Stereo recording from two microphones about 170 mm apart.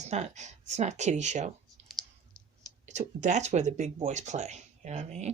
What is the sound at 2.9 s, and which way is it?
Speech, 45° right (ahead or behind).